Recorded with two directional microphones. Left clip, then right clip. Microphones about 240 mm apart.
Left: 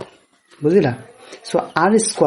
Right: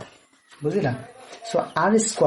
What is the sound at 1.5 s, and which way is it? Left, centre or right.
Speech, left.